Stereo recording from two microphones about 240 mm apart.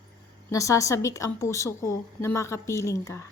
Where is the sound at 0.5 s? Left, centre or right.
Centre.